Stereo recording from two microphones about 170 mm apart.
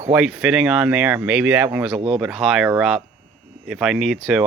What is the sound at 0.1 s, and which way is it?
Speech, 5° right (ahead or behind).